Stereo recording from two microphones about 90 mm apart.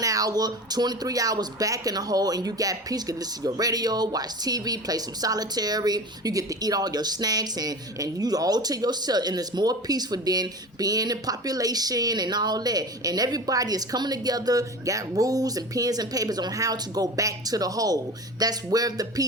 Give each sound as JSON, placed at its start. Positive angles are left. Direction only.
{"t": 0.0, "sound": "speech", "side_deg": -40}